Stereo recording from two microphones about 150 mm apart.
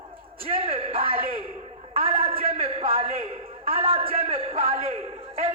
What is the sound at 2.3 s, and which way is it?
Speech, 40° right (ahead or behind).